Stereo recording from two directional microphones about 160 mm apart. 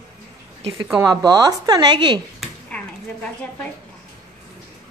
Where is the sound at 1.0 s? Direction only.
25° right (ahead or behind).